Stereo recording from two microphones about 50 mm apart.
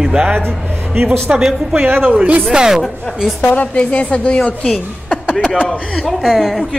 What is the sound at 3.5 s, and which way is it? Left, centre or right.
A woman's voice, left.